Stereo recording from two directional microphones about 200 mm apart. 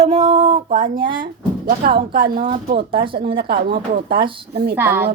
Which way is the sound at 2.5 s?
30° right (ahead or behind).